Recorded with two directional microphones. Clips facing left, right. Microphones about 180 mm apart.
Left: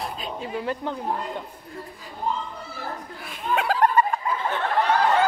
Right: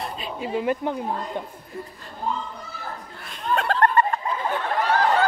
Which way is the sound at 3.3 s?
5° left (ahead or behind).